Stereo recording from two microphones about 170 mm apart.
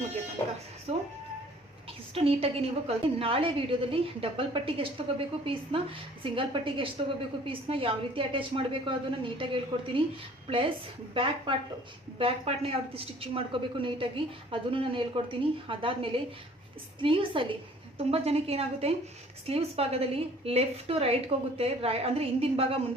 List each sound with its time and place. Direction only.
0.9 s music: 40° right (ahead or behind)
2.1 s a woman's voice: 35° right (ahead or behind)
11.1 s a woman's voice: 30° right (ahead or behind)